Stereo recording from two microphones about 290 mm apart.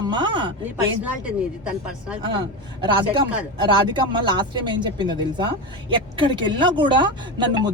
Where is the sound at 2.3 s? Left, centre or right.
Centre.